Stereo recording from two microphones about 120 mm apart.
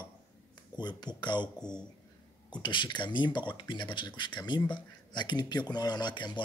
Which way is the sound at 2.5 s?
40° left (ahead or behind).